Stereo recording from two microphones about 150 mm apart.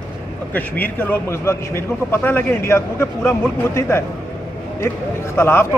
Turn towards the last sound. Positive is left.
turn(degrees=15)  # may be behind; listen again after turning